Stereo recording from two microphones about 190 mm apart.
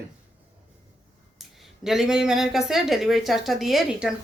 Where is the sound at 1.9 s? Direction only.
Centre (ahead or behind).